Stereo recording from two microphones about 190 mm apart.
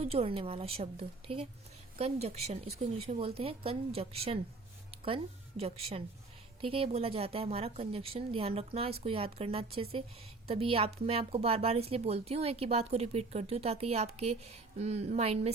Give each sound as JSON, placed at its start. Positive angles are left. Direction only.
{"t": 0.0, "sound": "a woman's voice", "side_deg": -30}